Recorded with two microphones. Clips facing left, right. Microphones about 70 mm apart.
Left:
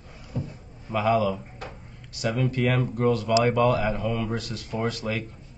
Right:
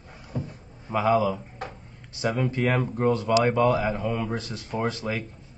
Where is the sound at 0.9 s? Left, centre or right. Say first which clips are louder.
Right 1 dB; right.